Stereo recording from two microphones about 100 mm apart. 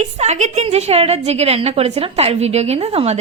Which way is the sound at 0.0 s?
90° right.